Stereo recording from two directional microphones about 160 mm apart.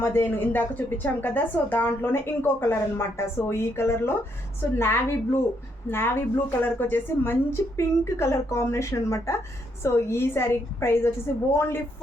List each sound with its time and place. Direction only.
0.0 s a woman's voice: 15° left (ahead or behind)